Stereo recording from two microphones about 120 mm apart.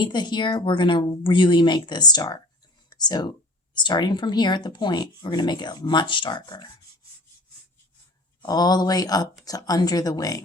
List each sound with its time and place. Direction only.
0.0 s speech: 40° left (ahead or behind)
8.4 s speech: 35° left (ahead or behind)